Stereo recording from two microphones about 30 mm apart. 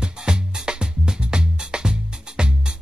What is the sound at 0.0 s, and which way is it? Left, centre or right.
Music, right.